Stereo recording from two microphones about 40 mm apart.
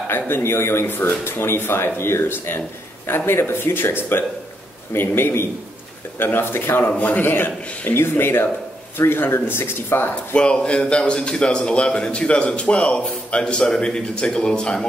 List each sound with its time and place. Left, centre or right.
0.1 s speech: left
3.1 s speech: left
4.9 s speech: left
7.0 s a man's voice: left
10.3 s a man's voice: left